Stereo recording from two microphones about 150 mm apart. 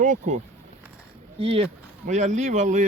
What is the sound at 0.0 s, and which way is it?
Speech, 55° right (ahead or behind).